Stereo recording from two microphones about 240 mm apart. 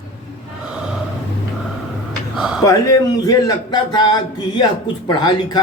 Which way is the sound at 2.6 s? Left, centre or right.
Centre.